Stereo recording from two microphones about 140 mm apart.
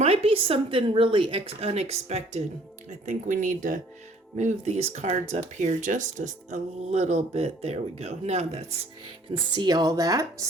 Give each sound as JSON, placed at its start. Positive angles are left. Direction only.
{"t": 0.0, "sound": "speech", "side_deg": -45}
{"t": 3.1, "sound": "speech", "side_deg": -65}
{"t": 4.4, "sound": "speech", "side_deg": -55}
{"t": 5.5, "sound": "speech", "side_deg": -60}
{"t": 9.3, "sound": "speech", "side_deg": -30}